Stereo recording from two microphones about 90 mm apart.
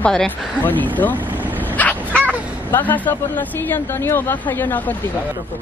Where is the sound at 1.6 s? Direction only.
15° left (ahead or behind).